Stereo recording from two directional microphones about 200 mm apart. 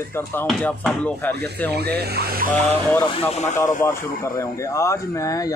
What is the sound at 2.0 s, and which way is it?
Speech, 50° right (ahead or behind).